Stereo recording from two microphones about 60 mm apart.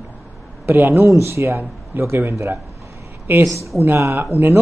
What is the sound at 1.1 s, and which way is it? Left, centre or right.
Speech, right.